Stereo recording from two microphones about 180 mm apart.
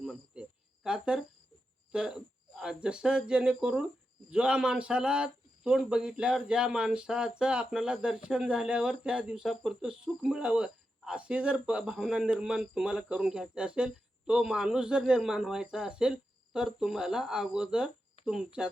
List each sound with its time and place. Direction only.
0.0 s cricket: centre (ahead or behind)
0.9 s a sound: 5° right (ahead or behind)
4.3 s speech: 5° right (ahead or behind)